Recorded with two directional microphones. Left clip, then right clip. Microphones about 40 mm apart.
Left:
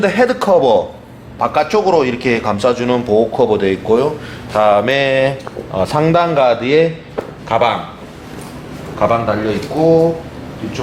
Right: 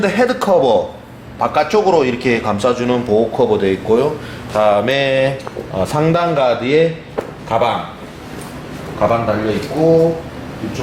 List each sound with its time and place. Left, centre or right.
0.0 s a man's voice: centre
9.0 s a man's voice: centre
9.7 s speech: left